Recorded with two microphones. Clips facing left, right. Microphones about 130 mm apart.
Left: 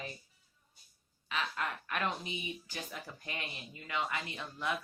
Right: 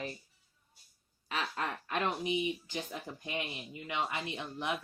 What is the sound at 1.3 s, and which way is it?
Speech, 30° right (ahead or behind).